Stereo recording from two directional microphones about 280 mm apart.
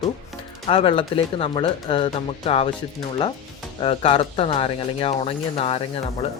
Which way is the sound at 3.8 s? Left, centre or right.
Centre.